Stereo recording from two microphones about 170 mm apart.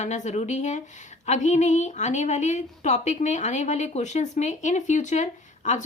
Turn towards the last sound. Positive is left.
turn(degrees=45)  # may be behind; listen again after turning